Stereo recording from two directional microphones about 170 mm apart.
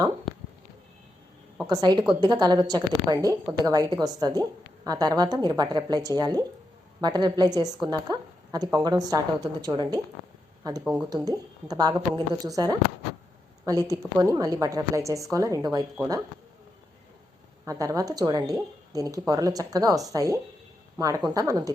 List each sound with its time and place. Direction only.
1.6 s a woman's voice: 25° right (ahead or behind)
17.7 s a woman's voice: 20° right (ahead or behind)